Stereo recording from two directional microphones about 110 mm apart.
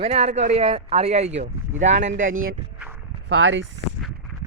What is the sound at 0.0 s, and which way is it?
Speech, 75° right (ahead or behind).